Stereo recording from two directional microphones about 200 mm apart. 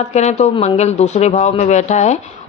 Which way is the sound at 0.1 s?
35° left (ahead or behind).